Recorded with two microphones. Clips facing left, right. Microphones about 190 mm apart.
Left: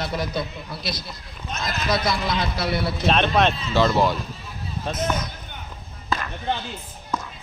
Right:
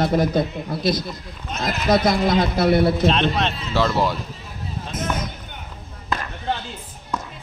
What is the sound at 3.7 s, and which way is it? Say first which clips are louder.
Speech: even; 5° right (ahead or behind).